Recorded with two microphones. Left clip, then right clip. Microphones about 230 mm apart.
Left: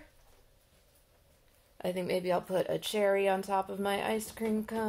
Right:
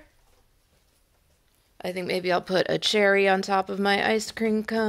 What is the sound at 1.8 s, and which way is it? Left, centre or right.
Speech, centre.